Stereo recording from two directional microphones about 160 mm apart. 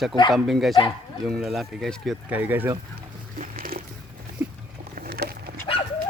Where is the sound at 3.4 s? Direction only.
65° right (ahead or behind).